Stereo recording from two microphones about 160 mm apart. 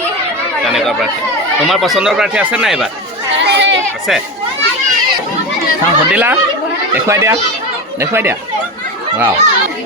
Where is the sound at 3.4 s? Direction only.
90° right.